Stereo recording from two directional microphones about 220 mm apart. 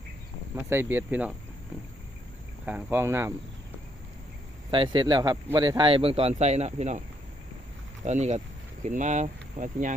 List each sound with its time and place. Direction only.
0.5 s speech: 10° right (ahead or behind)
2.6 s speech: 10° right (ahead or behind)
4.7 s speech: 20° right (ahead or behind)
8.0 s speech: 30° right (ahead or behind)